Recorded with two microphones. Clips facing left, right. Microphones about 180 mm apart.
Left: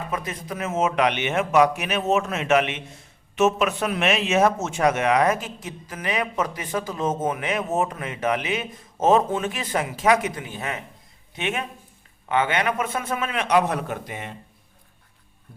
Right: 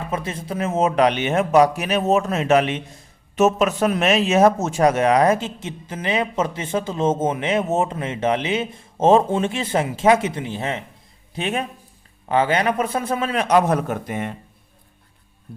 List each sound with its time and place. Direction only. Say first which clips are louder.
0.1 s speech: right 4 dB; 30° right (ahead or behind); by 14.3 s 50° right (ahead or behind)